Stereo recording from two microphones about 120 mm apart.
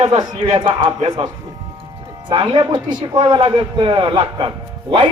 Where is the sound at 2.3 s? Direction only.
40° right (ahead or behind).